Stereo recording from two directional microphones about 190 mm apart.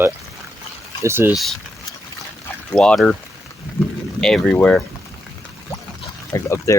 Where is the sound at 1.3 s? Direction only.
Centre (ahead or behind).